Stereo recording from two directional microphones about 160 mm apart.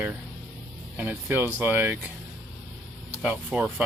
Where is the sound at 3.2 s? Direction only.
10° right (ahead or behind).